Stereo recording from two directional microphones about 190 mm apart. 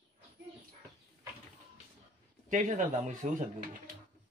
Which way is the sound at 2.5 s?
40° right (ahead or behind).